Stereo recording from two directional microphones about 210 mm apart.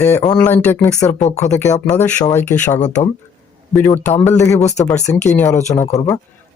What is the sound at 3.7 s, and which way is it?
Speech, 10° left (ahead or behind).